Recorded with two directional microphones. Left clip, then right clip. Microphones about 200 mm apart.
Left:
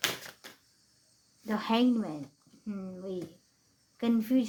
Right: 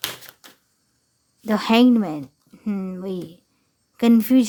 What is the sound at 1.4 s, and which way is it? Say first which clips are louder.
Speech: right 11 dB; 40° right (ahead or behind).